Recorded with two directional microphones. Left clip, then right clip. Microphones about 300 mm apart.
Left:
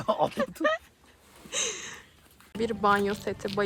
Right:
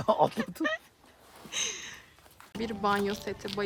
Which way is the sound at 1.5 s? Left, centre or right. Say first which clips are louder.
Left 2 dB; centre.